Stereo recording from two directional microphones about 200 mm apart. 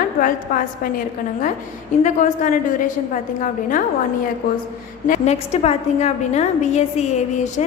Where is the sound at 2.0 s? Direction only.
40° left (ahead or behind).